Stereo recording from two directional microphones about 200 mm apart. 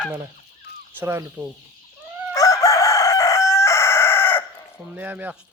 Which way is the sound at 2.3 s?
15° left (ahead or behind).